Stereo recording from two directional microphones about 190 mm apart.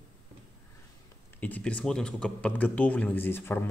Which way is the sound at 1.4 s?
10° left (ahead or behind).